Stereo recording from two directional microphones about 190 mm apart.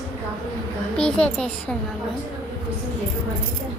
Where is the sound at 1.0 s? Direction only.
5° left (ahead or behind).